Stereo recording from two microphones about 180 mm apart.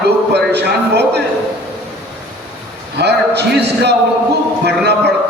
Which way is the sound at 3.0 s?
70° right (ahead or behind).